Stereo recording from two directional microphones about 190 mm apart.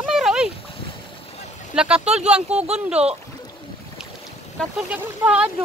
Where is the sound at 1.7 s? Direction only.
5° right (ahead or behind).